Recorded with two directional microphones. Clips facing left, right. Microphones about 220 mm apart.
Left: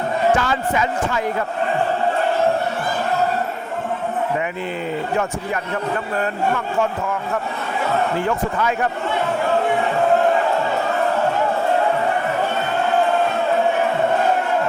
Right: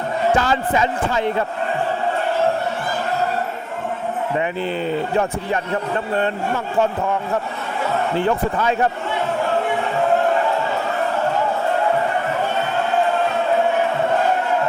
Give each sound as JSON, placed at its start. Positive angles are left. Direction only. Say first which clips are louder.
{"t": 0.3, "sound": "speech", "louder": "right 2 dB", "side_deg": -35}
{"t": 8.2, "sound": "speech", "louder": "right 2 dB", "side_deg": -35}